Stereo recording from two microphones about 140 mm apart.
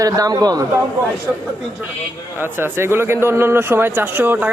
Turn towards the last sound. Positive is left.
turn(degrees=-15)  # may be behind; listen again after turning